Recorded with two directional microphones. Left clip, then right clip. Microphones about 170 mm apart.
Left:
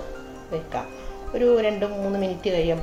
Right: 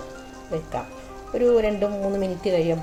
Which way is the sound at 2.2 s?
45° right (ahead or behind).